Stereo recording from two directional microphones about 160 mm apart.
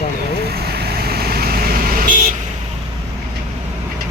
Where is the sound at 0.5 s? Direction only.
85° right; by 2.0 s 65° right (ahead or behind).